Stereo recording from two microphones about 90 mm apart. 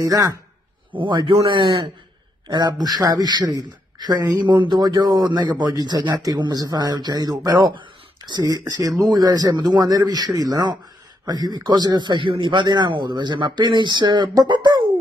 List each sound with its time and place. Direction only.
0.0 s speech: 45° right (ahead or behind)
0.9 s a man's voice: 65° right (ahead or behind)
2.4 s a man's voice: 50° right (ahead or behind)